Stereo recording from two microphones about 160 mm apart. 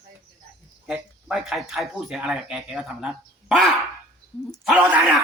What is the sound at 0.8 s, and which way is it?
Speech, 5° right (ahead or behind).